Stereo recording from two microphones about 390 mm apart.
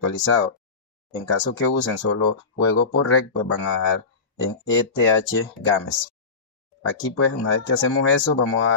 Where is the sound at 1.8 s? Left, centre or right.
Left.